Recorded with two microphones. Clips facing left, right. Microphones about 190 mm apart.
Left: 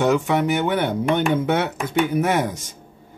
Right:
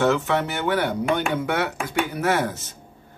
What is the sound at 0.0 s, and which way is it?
A man's voice, 15° left (ahead or behind).